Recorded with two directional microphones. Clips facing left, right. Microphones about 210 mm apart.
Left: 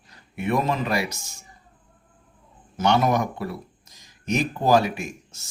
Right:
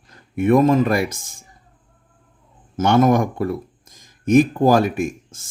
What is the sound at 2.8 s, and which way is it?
Speech, 50° right (ahead or behind).